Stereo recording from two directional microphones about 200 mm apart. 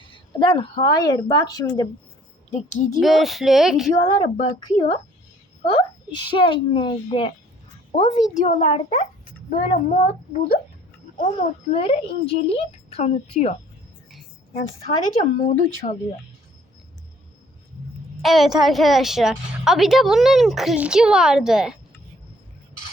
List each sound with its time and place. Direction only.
0.0 s speech: 25° left (ahead or behind)
2.5 s a child's voice: 35° left (ahead or behind)
3.0 s a woman's voice: centre (ahead or behind)
4.0 s a child's voice: 35° left (ahead or behind)
5.6 s a child's voice: 25° left (ahead or behind); by 10.6 s 40° left (ahead or behind)
11.7 s speech: 30° left (ahead or behind)
15.1 s a child's voice: 35° left (ahead or behind)
18.2 s a woman's voice: centre (ahead or behind)